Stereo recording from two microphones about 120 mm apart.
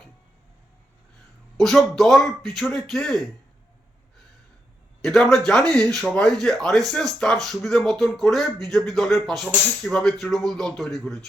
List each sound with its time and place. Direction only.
1.5 s a man's voice: centre (ahead or behind)
5.0 s a man's voice: 5° left (ahead or behind)